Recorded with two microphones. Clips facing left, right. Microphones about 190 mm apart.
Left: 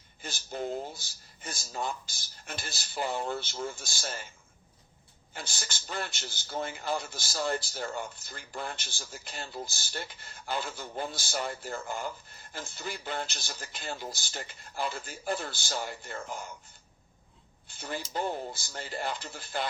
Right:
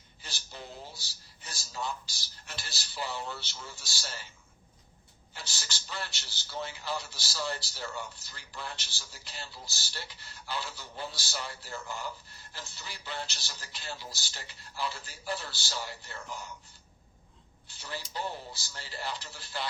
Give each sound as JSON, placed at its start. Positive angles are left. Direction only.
{"t": 0.2, "sound": "a man's voice", "side_deg": 50}
{"t": 5.3, "sound": "a man's voice", "side_deg": 50}
{"t": 17.7, "sound": "a man's voice", "side_deg": 50}